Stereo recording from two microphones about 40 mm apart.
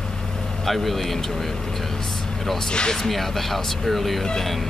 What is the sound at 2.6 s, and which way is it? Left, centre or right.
Speech, centre.